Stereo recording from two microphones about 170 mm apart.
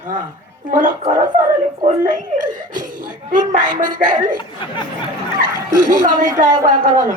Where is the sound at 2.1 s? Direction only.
50° right (ahead or behind).